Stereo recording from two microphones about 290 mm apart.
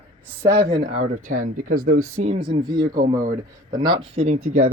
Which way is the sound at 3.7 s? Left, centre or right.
Centre.